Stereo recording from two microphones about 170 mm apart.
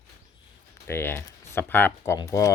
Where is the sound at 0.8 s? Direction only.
15° left (ahead or behind).